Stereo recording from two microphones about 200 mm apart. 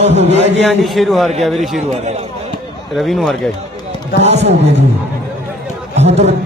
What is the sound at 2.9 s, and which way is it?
Speech, centre (ahead or behind).